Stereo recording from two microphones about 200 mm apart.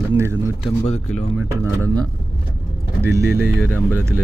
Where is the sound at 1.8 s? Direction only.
20° right (ahead or behind).